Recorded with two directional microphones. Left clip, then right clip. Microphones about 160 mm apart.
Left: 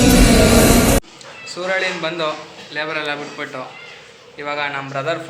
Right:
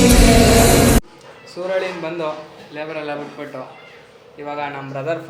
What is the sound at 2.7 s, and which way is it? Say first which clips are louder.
A man's voice: left 4 dB; 5° right (ahead or behind).